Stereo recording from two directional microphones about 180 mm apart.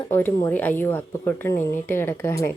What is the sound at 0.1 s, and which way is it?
A woman's voice, 10° left (ahead or behind).